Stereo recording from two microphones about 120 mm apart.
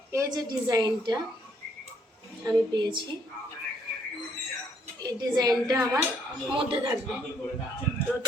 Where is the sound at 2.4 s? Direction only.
40° right (ahead or behind).